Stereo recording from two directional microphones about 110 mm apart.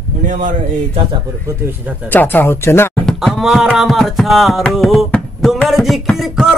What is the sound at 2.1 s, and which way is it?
Speech, 15° left (ahead or behind).